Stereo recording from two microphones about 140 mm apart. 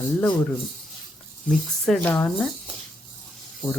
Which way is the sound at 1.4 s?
5° left (ahead or behind).